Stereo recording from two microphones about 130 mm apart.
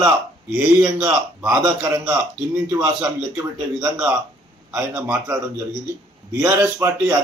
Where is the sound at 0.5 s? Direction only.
10° right (ahead or behind).